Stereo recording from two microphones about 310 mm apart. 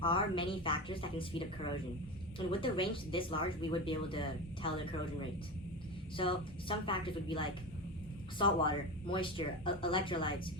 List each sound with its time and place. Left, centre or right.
0.0 s speech: centre
2.5 s speech: centre
6.1 s speech: centre